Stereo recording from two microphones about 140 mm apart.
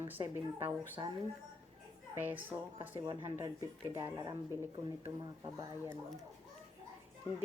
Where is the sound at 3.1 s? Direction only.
25° right (ahead or behind).